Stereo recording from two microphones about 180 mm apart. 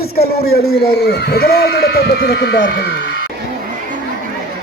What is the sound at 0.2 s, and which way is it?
Speech, 60° left (ahead or behind).